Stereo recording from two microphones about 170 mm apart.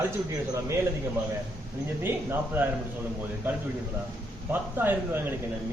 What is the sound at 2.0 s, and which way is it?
Speech, 15° right (ahead or behind).